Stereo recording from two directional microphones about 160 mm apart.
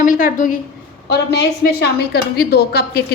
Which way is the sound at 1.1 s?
90° left.